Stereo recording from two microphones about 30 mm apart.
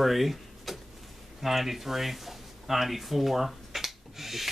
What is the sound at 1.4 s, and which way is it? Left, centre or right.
Speech, centre.